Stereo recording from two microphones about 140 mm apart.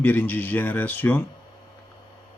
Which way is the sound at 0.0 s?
15° left (ahead or behind).